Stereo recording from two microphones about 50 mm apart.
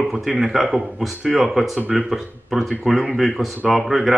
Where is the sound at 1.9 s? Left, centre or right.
Centre.